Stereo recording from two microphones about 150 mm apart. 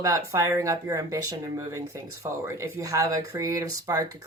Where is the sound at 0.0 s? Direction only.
20° right (ahead or behind).